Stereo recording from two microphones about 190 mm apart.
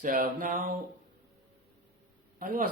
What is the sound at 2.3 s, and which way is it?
Speech, 45° right (ahead or behind).